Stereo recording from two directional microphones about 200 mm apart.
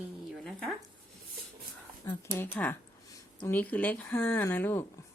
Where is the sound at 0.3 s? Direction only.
Centre (ahead or behind).